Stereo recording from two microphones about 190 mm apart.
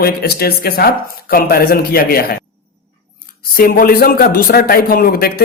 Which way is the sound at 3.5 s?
50° left (ahead or behind).